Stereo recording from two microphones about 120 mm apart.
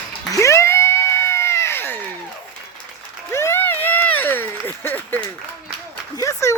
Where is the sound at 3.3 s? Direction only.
20° left (ahead or behind).